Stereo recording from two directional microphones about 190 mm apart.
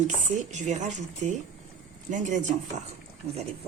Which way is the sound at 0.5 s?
40° right (ahead or behind).